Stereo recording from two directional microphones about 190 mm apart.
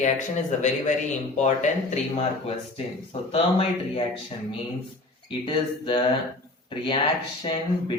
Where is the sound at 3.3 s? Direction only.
30° left (ahead or behind).